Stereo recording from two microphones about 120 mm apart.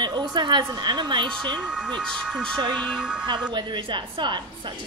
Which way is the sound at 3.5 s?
40° right (ahead or behind).